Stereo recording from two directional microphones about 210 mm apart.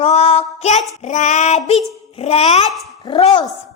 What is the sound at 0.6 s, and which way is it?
A woman's voice, 35° left (ahead or behind).